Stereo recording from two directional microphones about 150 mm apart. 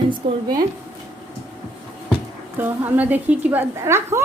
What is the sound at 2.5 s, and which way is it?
A woman's voice, 15° right (ahead or behind).